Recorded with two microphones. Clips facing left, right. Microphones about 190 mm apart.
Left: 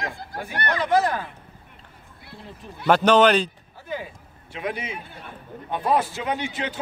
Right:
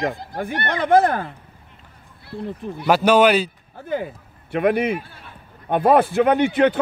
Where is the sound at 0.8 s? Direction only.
55° right (ahead or behind).